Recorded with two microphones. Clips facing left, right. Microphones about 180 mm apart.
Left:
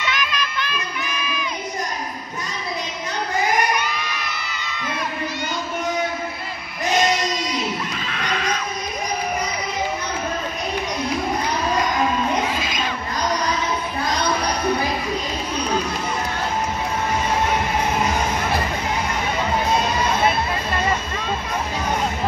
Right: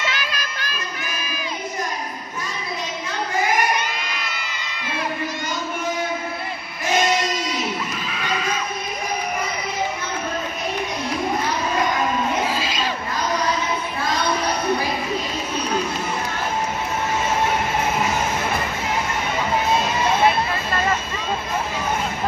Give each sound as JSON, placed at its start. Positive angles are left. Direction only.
{"t": 0.1, "sound": "music", "side_deg": -35}
{"t": 8.1, "sound": "neigh", "side_deg": -5}
{"t": 12.5, "sound": "crowd", "side_deg": -30}